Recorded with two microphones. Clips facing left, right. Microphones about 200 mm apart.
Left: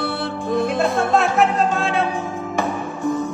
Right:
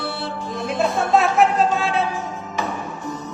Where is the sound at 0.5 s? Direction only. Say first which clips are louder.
Left 4 dB; 55° left (ahead or behind).